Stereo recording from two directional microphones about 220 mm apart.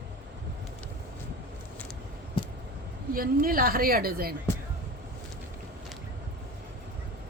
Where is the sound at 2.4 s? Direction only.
25° left (ahead or behind).